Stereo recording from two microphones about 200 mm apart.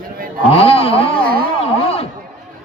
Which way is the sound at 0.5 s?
30° left (ahead or behind).